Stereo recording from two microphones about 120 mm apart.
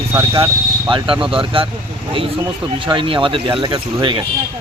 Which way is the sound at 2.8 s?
45° right (ahead or behind).